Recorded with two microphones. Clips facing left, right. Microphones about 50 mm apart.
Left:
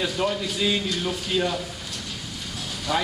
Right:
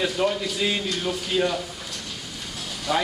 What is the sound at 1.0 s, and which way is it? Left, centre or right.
Speech, centre.